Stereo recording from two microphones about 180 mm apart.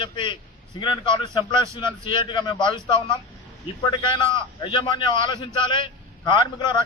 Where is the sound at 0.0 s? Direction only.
25° left (ahead or behind).